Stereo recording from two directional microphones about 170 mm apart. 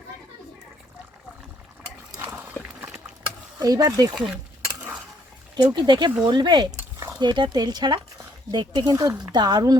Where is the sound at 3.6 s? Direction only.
20° right (ahead or behind).